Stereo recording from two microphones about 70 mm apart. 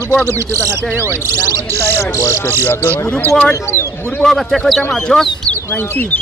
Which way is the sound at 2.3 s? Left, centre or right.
Left.